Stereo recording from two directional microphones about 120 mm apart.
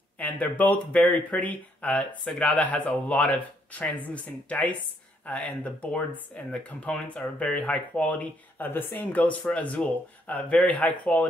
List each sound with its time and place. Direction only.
0.2 s speech: 15° left (ahead or behind)